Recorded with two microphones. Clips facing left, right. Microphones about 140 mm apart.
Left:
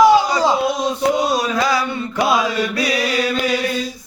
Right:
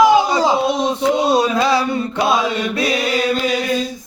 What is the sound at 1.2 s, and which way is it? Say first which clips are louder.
Music: right 3 dB; 25° right (ahead or behind).